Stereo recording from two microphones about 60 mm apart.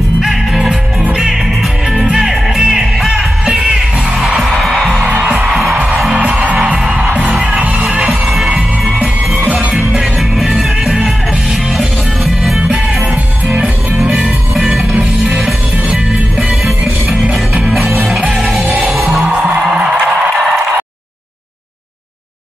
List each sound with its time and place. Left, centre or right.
0.2 s music: centre
4.4 s music: centre
6.1 s music: centre
8.0 s music: centre
9.8 s music: centre
12.6 s music: centre